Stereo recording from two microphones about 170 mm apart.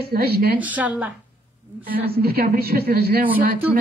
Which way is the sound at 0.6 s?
10° right (ahead or behind).